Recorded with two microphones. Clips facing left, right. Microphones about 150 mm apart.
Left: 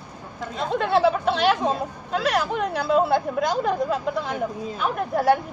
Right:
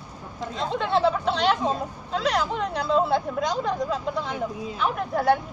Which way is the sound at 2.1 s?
55° left (ahead or behind).